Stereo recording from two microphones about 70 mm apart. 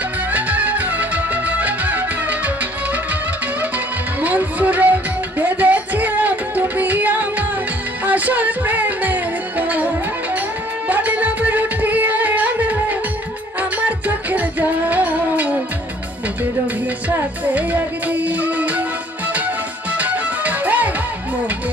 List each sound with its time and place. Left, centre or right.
0.3 s music: right
4.2 s music: right
17.1 s music: right
19.9 s music: right